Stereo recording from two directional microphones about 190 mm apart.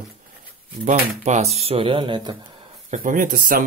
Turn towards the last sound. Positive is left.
turn(degrees=-45)  # may be behind; listen again after turning